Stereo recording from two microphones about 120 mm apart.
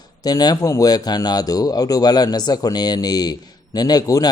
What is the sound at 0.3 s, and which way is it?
Speech, 35° left (ahead or behind).